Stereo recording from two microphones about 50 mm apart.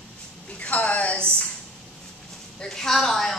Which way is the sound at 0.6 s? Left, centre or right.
Left.